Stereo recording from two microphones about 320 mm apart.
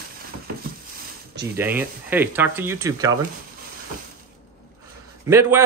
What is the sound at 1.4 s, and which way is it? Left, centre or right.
Speech, centre.